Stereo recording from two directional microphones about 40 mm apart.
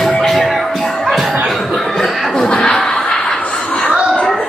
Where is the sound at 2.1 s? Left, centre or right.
Centre.